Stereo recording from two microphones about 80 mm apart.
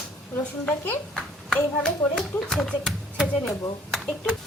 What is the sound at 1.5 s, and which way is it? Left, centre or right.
Speech, centre.